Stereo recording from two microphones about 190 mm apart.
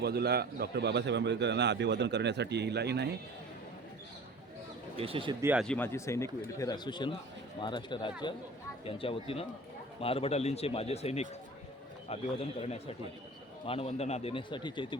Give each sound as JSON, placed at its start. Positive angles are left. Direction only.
{"t": 0.0, "sound": "a man's voice", "side_deg": -60}
{"t": 4.9, "sound": "speech", "side_deg": -30}
{"t": 5.4, "sound": "speech", "side_deg": -10}
{"t": 5.6, "sound": "a man's voice", "side_deg": 10}